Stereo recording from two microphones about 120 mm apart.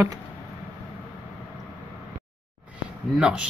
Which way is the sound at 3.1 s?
5° right (ahead or behind).